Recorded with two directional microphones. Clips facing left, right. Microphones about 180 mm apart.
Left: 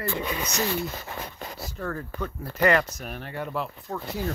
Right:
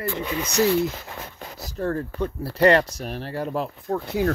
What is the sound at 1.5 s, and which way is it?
Speech, 40° right (ahead or behind).